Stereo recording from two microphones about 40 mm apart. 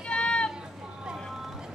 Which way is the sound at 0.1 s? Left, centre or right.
Left.